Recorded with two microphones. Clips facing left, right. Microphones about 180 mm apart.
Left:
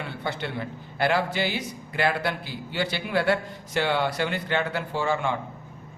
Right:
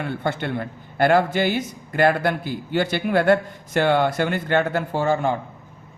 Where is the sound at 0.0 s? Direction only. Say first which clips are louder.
Right 6 dB; 50° right (ahead or behind).